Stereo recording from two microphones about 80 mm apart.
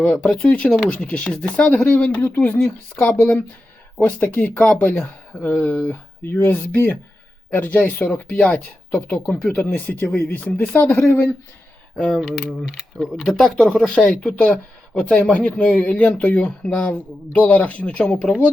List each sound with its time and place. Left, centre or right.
0.2 s speech: centre
11.9 s speech: centre
12.3 s mechanisms: centre
13.2 s speech: centre